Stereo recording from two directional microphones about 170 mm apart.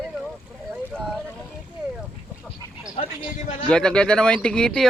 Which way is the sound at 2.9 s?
40° left (ahead or behind).